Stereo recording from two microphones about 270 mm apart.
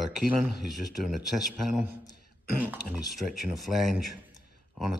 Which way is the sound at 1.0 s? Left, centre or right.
Centre.